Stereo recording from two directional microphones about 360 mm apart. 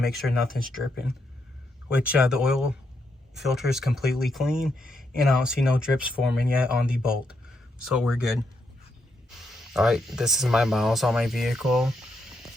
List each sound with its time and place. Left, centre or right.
0.0 s speech: centre
9.7 s speech: centre